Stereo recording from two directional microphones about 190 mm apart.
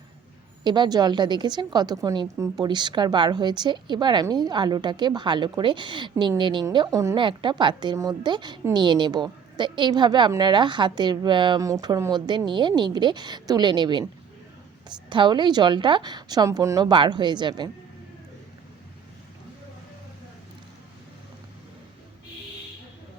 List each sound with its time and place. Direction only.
0.6 s a woman's voice: 25° right (ahead or behind)